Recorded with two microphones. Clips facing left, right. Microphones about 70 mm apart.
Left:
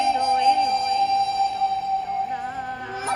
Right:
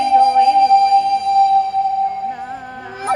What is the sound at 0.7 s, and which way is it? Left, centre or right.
Music, right.